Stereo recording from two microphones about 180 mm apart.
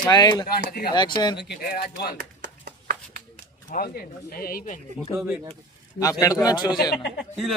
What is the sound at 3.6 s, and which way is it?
Speech, 55° left (ahead or behind).